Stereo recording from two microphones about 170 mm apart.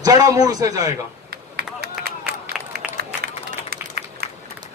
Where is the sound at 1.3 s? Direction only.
70° right (ahead or behind).